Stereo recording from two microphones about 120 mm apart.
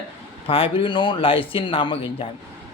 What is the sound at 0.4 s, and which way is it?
Speech, 50° left (ahead or behind).